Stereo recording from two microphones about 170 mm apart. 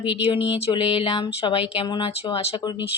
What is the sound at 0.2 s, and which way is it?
Speech, 30° left (ahead or behind).